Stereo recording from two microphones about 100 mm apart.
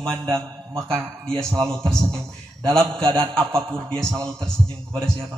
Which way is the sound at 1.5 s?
30° right (ahead or behind).